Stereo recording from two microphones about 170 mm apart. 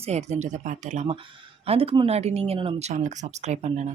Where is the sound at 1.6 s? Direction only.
35° right (ahead or behind).